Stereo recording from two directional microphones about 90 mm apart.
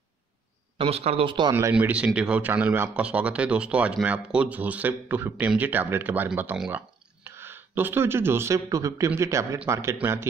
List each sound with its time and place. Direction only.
0.7 s speech: 90° right; by 1.5 s 70° right (ahead or behind)
1.7 s speech: 15° right (ahead or behind)